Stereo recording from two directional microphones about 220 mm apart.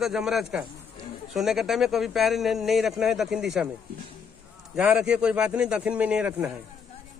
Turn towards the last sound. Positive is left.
turn(degrees=-5)  # may be behind; listen again after turning